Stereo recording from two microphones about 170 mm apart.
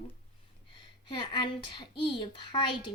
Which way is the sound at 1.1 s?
25° left (ahead or behind).